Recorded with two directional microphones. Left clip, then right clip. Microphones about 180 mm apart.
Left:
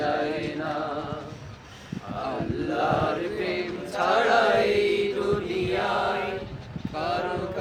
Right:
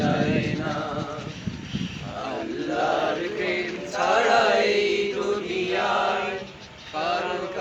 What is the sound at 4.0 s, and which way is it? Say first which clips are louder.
Chant: right 1 dB; 25° right (ahead or behind).